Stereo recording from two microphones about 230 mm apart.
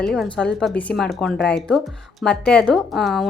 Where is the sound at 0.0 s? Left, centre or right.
Centre.